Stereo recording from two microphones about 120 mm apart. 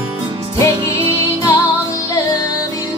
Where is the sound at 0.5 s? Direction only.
25° left (ahead or behind).